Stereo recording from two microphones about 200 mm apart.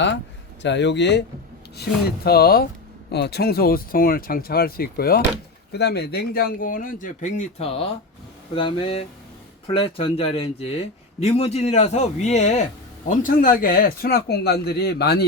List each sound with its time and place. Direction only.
0.6 s a man's voice: 60° left (ahead or behind)